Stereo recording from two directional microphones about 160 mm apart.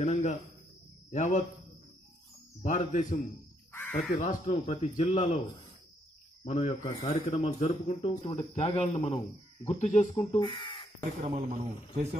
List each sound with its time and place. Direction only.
0.0 s speech: 45° left (ahead or behind)
2.6 s speech: 45° left (ahead or behind)
7.4 s speech: 40° left (ahead or behind)
10.3 s speech: 35° left (ahead or behind)
11.2 s speech: 40° right (ahead or behind)